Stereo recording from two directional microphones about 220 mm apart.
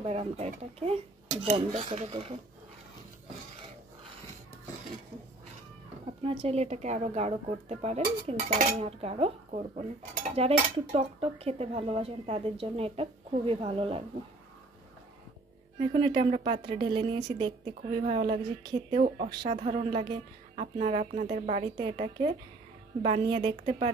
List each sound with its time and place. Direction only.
0.0 s speech: 25° right (ahead or behind)
6.4 s speech: 30° right (ahead or behind)
15.8 s speech: 25° right (ahead or behind)
18.9 s speech: 30° right (ahead or behind)